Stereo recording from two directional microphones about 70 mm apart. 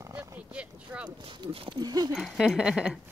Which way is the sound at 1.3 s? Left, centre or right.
Right.